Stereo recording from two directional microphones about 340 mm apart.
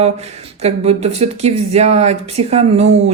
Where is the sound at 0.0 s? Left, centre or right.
Centre.